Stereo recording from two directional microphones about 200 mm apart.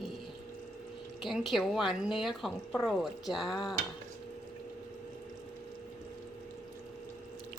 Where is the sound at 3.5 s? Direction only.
20° left (ahead or behind).